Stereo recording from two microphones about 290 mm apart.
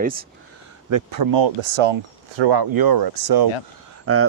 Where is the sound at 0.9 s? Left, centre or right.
Right.